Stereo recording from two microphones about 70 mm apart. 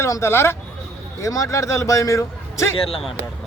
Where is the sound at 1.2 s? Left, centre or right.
Left.